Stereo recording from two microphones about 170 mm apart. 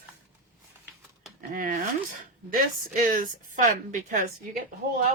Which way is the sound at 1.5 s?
55° right (ahead or behind).